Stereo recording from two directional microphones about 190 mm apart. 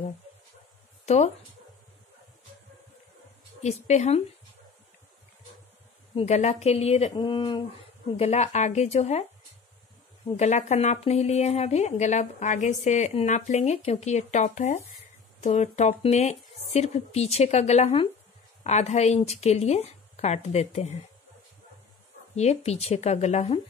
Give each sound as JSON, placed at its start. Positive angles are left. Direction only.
{"t": 1.0, "sound": "speech", "side_deg": 35}
{"t": 3.6, "sound": "speech", "side_deg": 35}
{"t": 6.1, "sound": "speech", "side_deg": 35}
{"t": 10.3, "sound": "speech", "side_deg": 35}
{"t": 22.3, "sound": "speech", "side_deg": 35}